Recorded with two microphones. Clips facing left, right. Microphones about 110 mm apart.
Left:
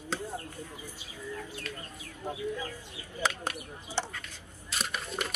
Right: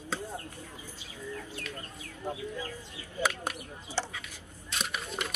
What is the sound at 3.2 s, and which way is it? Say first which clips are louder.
Speech: right 1 dB; 5° right (ahead or behind).